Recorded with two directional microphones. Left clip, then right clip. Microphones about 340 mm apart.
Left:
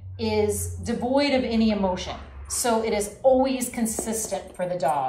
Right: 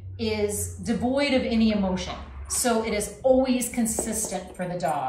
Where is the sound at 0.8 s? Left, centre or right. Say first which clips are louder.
Left 2 dB; centre.